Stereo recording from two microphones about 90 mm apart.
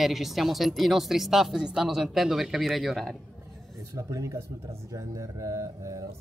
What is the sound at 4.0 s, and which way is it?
Speech, 35° right (ahead or behind).